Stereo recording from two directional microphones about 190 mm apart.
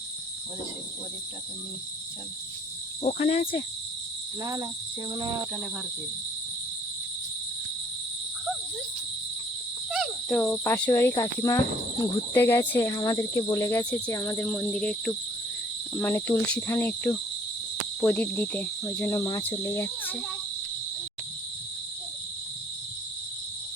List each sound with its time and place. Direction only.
3.0 s insect: 35° left (ahead or behind)
4.4 s cricket: 20° right (ahead or behind)
9.9 s insect: centre (ahead or behind); by 11.6 s 15° left (ahead or behind)
12.3 s cricket: 10° left (ahead or behind)